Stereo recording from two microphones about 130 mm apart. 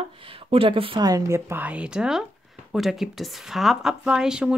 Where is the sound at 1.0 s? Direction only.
30° right (ahead or behind).